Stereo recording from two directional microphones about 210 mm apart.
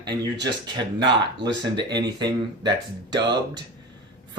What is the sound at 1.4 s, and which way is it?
Speech, 20° right (ahead or behind).